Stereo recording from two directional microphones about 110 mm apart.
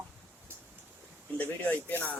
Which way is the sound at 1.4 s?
15° left (ahead or behind).